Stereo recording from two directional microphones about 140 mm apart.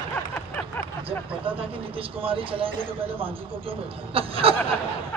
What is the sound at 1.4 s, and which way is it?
A man's voice, 40° right (ahead or behind).